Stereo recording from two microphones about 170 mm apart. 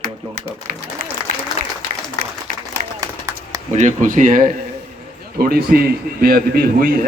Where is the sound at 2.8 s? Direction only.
50° right (ahead or behind).